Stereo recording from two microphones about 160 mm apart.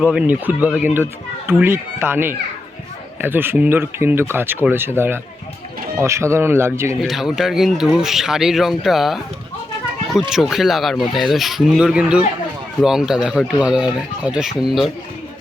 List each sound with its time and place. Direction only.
0.0 s speech: 10° right (ahead or behind)
7.0 s speech: centre (ahead or behind)